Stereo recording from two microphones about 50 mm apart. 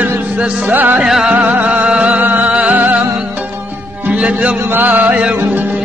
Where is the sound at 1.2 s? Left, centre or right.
Right.